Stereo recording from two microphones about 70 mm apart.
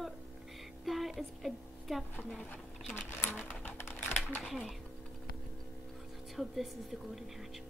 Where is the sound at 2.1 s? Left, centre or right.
Centre.